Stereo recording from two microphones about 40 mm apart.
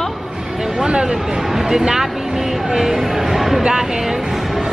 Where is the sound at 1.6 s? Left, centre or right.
Centre.